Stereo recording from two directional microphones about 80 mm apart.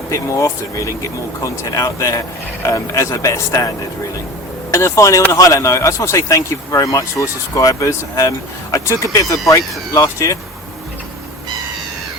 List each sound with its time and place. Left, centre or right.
0.1 s speech: left
4.7 s speech: left